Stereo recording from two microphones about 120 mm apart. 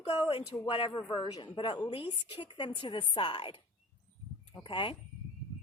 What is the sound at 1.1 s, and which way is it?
Speech, 45° left (ahead or behind).